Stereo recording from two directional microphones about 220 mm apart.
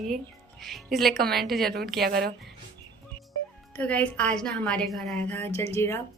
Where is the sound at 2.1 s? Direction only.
45° right (ahead or behind).